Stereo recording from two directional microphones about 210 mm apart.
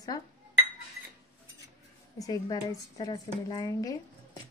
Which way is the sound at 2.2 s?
15° left (ahead or behind).